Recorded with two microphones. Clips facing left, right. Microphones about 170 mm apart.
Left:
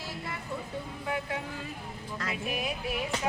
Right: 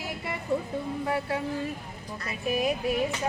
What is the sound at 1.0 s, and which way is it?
Speech, 35° right (ahead or behind).